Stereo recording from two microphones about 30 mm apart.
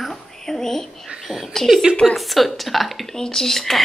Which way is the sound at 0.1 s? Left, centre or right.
Centre.